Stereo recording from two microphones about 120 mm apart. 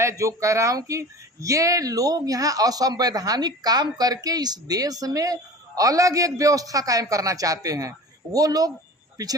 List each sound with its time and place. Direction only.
0.0 s speech: 25° right (ahead or behind)